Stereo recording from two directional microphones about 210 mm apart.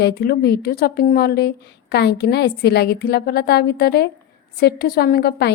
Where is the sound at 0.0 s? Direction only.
45° left (ahead or behind).